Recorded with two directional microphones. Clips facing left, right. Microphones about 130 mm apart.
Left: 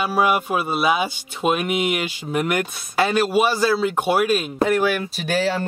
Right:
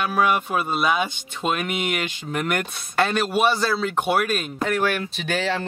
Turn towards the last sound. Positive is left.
turn(degrees=5)  # may be behind; listen again after turning